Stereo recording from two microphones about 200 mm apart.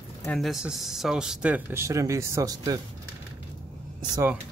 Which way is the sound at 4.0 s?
15° right (ahead or behind).